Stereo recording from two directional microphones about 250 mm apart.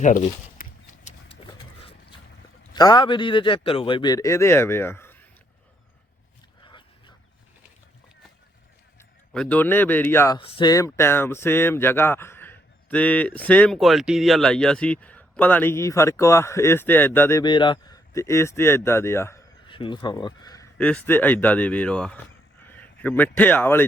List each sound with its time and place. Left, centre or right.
0.0 s a sound: left
1.8 s boat: left
2.7 s a man's voice: centre
6.6 s dog: centre
9.0 s a man's voice: centre
20.7 s speech: centre